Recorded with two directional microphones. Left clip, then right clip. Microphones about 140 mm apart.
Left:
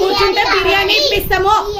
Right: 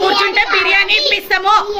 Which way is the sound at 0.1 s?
50° left (ahead or behind).